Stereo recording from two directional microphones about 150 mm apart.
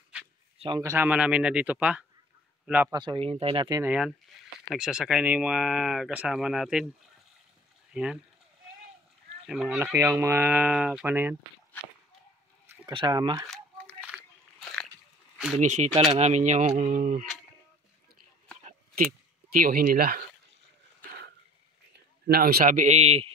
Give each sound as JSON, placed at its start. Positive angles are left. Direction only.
{"t": 0.7, "sound": "speech", "side_deg": -15}
{"t": 2.9, "sound": "speech", "side_deg": -30}
{"t": 3.8, "sound": "speech", "side_deg": -5}
{"t": 7.9, "sound": "speech", "side_deg": -5}
{"t": 9.5, "sound": "speech", "side_deg": -5}
{"t": 12.9, "sound": "speech", "side_deg": -30}
{"t": 14.1, "sound": "biting", "side_deg": -10}
{"t": 14.6, "sound": "a sound", "side_deg": 5}
{"t": 16.1, "sound": "speech", "side_deg": -50}
{"t": 18.6, "sound": "a sound", "side_deg": -55}
{"t": 19.5, "sound": "speech", "side_deg": -75}
{"t": 22.3, "sound": "a man's voice", "side_deg": -90}
{"t": 22.6, "sound": "speech", "side_deg": -55}